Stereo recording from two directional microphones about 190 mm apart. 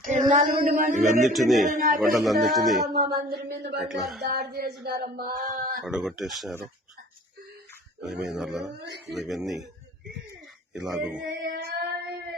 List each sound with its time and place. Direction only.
0.0 s female singing: 45° right (ahead or behind)
1.2 s speech: centre (ahead or behind)
1.6 s a sound: 40° right (ahead or behind)
2.1 s speech: centre (ahead or behind)
2.9 s a sound: 55° right (ahead or behind)
3.8 s speech: centre (ahead or behind)
4.2 s a sound: 55° right (ahead or behind)
4.8 s female singing: 55° right (ahead or behind)
5.9 s speech: 5° right (ahead or behind)
8.0 s speech: centre (ahead or behind)
10.8 s speech: 5° right (ahead or behind)
11.3 s a sound: 60° right (ahead or behind)